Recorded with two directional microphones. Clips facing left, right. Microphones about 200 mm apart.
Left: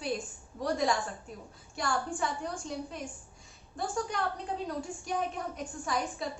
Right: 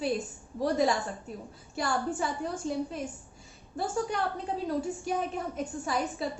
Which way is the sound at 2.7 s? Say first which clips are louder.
Right 9 dB; centre (ahead or behind).